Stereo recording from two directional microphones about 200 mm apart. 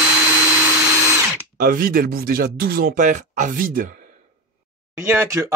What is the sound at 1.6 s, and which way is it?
Speech, 45° right (ahead or behind).